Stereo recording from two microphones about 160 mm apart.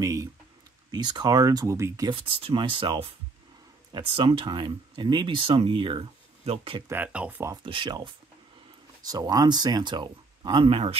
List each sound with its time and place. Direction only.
0.0 s speech: 20° right (ahead or behind)
2.0 s speech: 35° right (ahead or behind)
6.9 s speech: 10° right (ahead or behind)
7.6 s speech: 30° right (ahead or behind)